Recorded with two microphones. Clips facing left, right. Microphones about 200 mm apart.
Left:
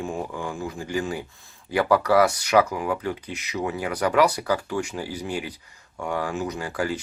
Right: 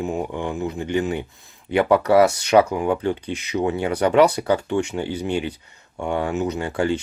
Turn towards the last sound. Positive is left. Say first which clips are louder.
# right 5 dB
turn(degrees=-25)  # may be behind; listen again after turning